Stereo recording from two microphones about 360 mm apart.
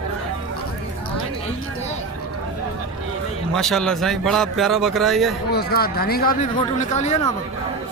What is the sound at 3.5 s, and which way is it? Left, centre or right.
A man's voice, centre.